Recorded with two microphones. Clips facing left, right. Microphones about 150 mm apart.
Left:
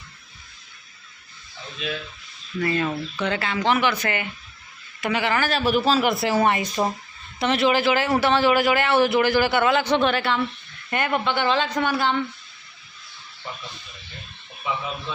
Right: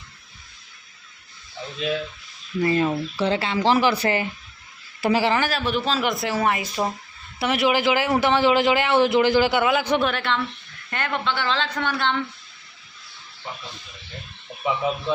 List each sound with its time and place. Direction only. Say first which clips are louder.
2.6 s a woman's voice: right 3 dB; 25° right (ahead or behind)
5.5 s speech: left 4 dB; 5° left (ahead or behind)
10.1 s speech: left 2 dB; 5° left (ahead or behind)